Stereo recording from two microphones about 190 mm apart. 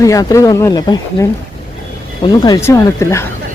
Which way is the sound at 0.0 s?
20° left (ahead or behind).